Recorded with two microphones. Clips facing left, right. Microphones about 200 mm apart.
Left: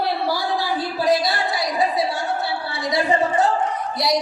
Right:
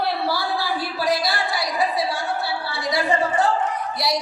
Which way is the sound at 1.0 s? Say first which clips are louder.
Left 4 dB; 20° left (ahead or behind).